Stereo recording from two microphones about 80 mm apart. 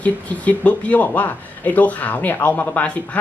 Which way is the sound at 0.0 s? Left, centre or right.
Centre.